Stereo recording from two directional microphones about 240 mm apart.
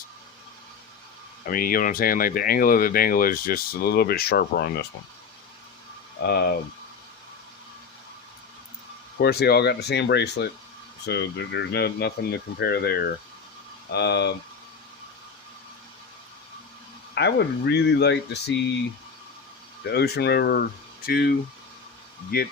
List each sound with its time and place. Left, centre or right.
1.5 s speech: left
6.2 s speech: left
9.1 s speech: left
17.2 s speech: left
19.8 s speech: left